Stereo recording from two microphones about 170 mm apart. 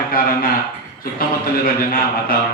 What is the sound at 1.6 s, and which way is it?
Speech, 60° left (ahead or behind).